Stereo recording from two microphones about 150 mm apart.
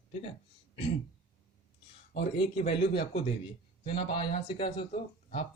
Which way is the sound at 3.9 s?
35° left (ahead or behind).